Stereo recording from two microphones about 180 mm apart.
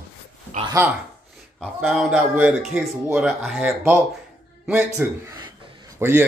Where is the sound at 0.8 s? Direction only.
15° right (ahead or behind).